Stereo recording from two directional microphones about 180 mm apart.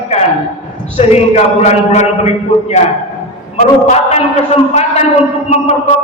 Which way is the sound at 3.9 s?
35° left (ahead or behind).